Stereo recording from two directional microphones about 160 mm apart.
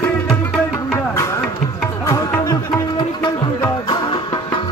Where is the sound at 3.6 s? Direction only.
25° left (ahead or behind).